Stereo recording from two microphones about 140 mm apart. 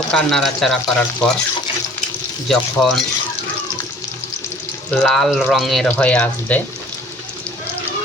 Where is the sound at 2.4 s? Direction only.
5° left (ahead or behind).